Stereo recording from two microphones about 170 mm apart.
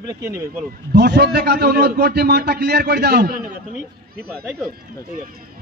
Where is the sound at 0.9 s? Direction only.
75° right (ahead or behind); by 3.5 s 60° right (ahead or behind).